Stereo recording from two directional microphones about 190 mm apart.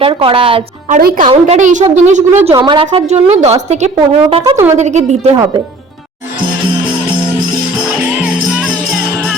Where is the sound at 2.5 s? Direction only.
25° right (ahead or behind).